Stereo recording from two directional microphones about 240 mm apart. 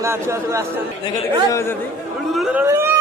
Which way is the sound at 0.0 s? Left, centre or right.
Centre.